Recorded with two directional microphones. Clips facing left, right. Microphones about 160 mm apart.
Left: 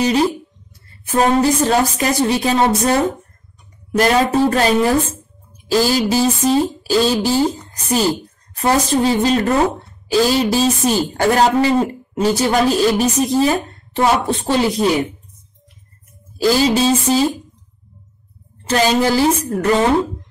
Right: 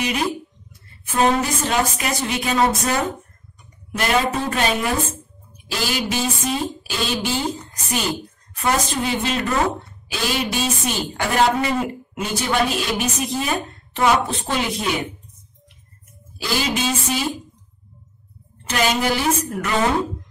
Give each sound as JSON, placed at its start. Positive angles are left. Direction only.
{"t": 0.0, "sound": "a sound", "side_deg": 35}
{"t": 1.0, "sound": "a woman's voice", "side_deg": 35}
{"t": 16.3, "sound": "a woman's voice", "side_deg": 35}
{"t": 18.6, "sound": "a woman's voice", "side_deg": 35}